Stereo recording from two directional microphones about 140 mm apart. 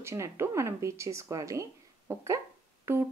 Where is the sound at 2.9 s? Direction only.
15° right (ahead or behind).